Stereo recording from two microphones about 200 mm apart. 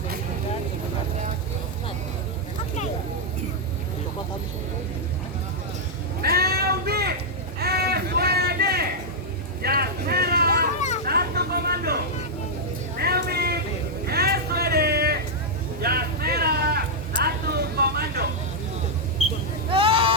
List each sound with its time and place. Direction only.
6.2 s a sound: 50° right (ahead or behind)
9.6 s vehicle: 50° right (ahead or behind)
10.8 s vehicle: 35° left (ahead or behind)
11.0 s vehicle: 50° right (ahead or behind)
13.0 s a sound: 50° right (ahead or behind)
17.2 s vehicle: 50° right (ahead or behind)
19.7 s vehicle: 25° right (ahead or behind)